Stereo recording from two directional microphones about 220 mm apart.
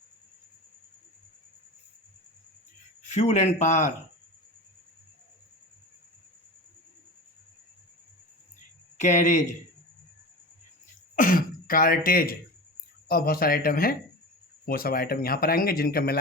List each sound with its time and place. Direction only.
3.1 s speech: 30° left (ahead or behind)
9.0 s speech: 35° left (ahead or behind)
11.1 s speech: 40° left (ahead or behind)